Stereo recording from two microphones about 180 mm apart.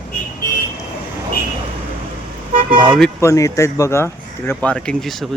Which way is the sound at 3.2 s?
15° left (ahead or behind).